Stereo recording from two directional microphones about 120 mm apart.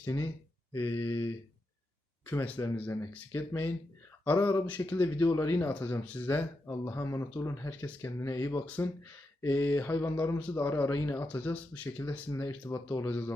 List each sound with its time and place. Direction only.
0.0 s speech: 25° left (ahead or behind)
2.3 s speech: 20° left (ahead or behind)